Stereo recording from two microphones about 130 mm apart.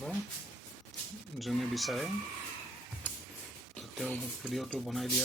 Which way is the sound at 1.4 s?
Centre (ahead or behind).